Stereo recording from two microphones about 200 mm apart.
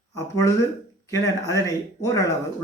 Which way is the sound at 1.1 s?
15° left (ahead or behind).